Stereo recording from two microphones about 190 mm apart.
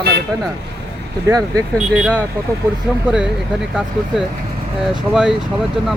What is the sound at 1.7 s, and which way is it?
Speech, 5° right (ahead or behind).